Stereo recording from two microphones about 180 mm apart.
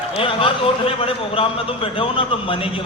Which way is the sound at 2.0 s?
30° left (ahead or behind).